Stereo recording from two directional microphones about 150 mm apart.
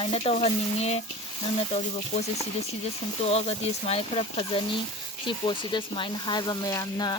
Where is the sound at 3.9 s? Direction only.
40° left (ahead or behind).